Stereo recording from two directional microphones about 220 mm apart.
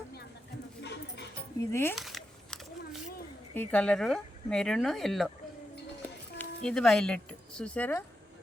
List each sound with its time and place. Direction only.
0.8 s music: 50° left (ahead or behind)
1.7 s speech: 10° left (ahead or behind)
2.0 s a sound: centre (ahead or behind)
3.5 s speech: 5° left (ahead or behind)
6.4 s speech: 5° left (ahead or behind)